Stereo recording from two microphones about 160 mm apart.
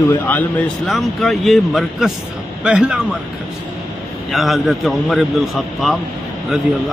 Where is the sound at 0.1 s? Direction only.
10° left (ahead or behind); by 3.2 s 5° right (ahead or behind).